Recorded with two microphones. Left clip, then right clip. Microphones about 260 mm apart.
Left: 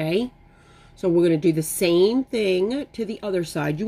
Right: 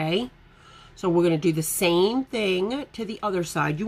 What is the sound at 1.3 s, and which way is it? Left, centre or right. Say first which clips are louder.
Speech: left 3 dB; centre.